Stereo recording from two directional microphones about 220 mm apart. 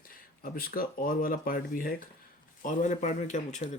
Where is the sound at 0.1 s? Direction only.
40° left (ahead or behind).